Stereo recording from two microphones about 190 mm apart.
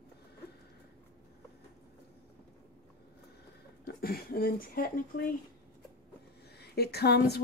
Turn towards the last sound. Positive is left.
turn(degrees=60)  # may be behind; listen again after turning